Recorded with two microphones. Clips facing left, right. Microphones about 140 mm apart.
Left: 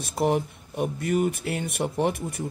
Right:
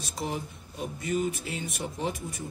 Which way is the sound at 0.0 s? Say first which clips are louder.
Left 10 dB; 60° left (ahead or behind).